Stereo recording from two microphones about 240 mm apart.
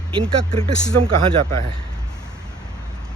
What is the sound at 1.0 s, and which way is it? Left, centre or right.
Speech, right.